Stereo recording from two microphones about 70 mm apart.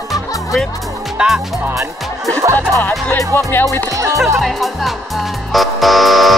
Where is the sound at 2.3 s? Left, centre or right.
Right.